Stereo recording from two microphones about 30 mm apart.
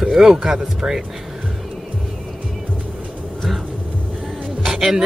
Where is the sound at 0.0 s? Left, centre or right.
Right.